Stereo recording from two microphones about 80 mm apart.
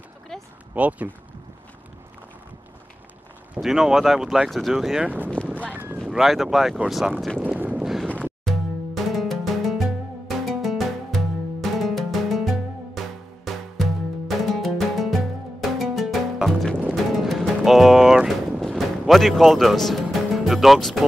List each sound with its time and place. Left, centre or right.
0.3 s a sound: centre
0.7 s speech: centre
3.6 s speech: centre
5.0 s speech: right
5.7 s a sound: right
6.0 s speech: centre
7.4 s boat: centre
7.8 s wind noise: centre
8.5 s music: centre